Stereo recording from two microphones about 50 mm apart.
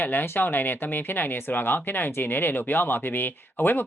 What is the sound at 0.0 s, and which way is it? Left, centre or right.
A woman's voice, left.